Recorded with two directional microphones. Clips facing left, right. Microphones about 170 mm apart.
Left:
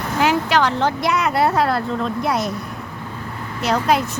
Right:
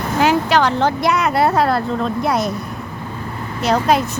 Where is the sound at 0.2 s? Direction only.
35° right (ahead or behind).